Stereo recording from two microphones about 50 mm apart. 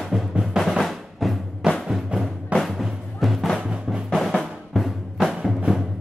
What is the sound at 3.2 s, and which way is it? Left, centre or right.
Music, centre.